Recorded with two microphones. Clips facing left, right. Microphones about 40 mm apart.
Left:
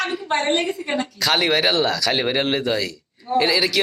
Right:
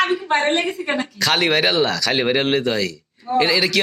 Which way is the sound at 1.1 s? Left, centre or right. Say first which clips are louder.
Right 1 dB; centre.